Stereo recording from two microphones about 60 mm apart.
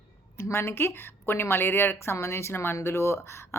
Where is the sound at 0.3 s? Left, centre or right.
Left.